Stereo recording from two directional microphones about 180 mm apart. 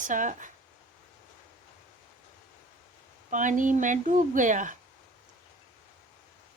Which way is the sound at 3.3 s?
45° right (ahead or behind).